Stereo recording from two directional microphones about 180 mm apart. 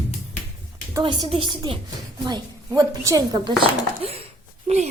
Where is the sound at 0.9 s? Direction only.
25° right (ahead or behind).